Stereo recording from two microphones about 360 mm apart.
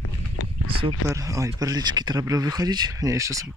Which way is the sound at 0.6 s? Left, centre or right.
Centre.